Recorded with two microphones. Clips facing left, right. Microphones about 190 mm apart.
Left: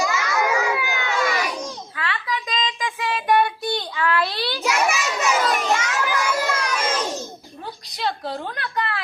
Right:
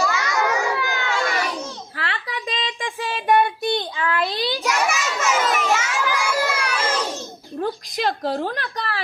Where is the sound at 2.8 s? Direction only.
25° right (ahead or behind).